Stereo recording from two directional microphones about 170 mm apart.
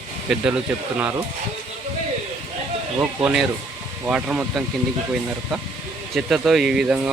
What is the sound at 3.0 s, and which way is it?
Speech, 10° right (ahead or behind).